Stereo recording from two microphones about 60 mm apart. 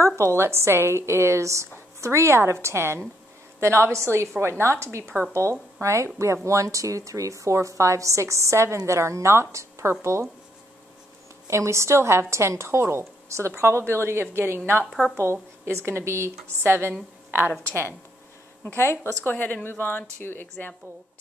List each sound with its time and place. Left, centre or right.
0.0 s a woman's voice: right
11.4 s a woman's voice: right
14.9 s speech: centre
15.6 s a woman's voice: right
18.8 s a woman's voice: left
19.3 s a woman's voice: left